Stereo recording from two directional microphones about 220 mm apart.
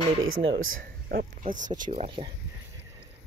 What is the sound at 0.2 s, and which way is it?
Speech, 65° right (ahead or behind).